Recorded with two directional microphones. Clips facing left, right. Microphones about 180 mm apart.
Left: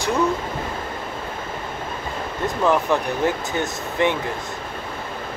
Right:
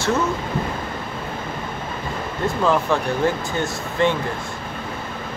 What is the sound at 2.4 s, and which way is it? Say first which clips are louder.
Speech: even; 15° left (ahead or behind).